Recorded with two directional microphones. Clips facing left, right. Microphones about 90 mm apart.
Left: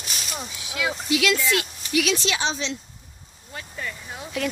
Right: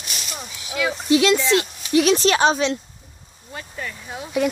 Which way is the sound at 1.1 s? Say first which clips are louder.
Right 6 dB; 30° right (ahead or behind).